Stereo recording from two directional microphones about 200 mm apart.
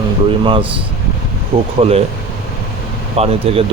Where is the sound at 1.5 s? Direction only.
25° right (ahead or behind).